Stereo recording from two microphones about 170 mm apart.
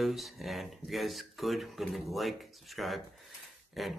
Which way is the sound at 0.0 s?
Centre (ahead or behind).